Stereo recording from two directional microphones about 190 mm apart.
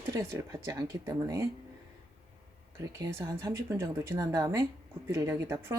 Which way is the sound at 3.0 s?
15° right (ahead or behind).